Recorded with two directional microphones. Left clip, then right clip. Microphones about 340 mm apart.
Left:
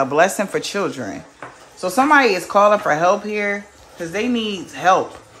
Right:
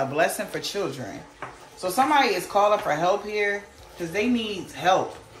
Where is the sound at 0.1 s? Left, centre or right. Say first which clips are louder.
Left 8 dB; centre.